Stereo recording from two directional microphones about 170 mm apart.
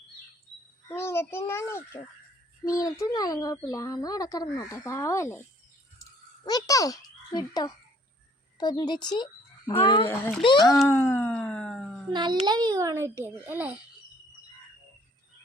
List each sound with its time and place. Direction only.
0.9 s a child's voice: 15° left (ahead or behind)
6.4 s a child's voice: 20° left (ahead or behind)
10.1 s a child's voice: 15° left (ahead or behind)
10.4 s speech: 25° left (ahead or behind)
10.8 s a sound: 15° left (ahead or behind)
12.1 s a child's voice: 25° right (ahead or behind)